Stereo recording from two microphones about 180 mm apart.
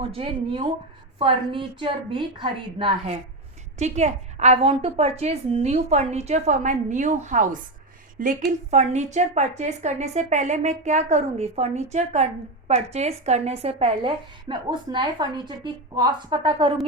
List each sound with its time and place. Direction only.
0.1 s a woman's voice: 30° right (ahead or behind)